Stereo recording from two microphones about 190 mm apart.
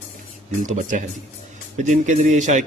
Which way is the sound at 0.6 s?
40° right (ahead or behind).